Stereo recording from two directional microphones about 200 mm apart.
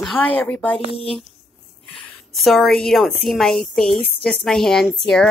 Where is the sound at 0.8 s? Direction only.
30° left (ahead or behind).